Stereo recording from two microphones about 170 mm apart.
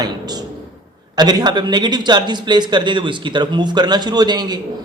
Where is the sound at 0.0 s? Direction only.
25° right (ahead or behind).